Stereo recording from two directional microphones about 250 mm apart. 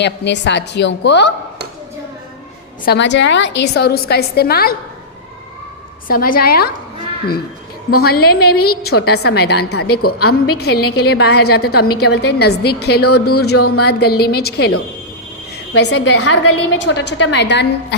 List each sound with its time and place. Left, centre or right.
0.0 s a woman's voice: left
2.8 s a woman's voice: left
6.1 s a woman's voice: left
7.9 s a woman's voice: left
13.5 s speech: left
13.7 s a woman's voice: left
15.7 s a woman's voice: left